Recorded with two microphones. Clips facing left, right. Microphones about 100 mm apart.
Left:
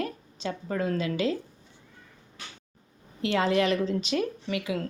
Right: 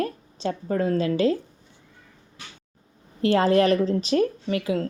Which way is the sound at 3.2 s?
40° right (ahead or behind).